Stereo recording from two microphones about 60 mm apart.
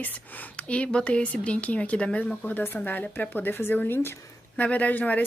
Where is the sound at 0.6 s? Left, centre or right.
Centre.